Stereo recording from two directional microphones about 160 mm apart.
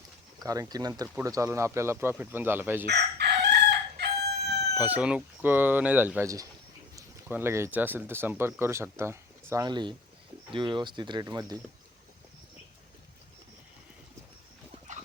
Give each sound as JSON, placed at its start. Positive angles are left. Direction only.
{"t": 0.3, "sound": "speech", "side_deg": -20}
{"t": 2.8, "sound": "chicken", "side_deg": -90}
{"t": 4.8, "sound": "speech", "side_deg": -10}
{"t": 9.6, "sound": "speech", "side_deg": -30}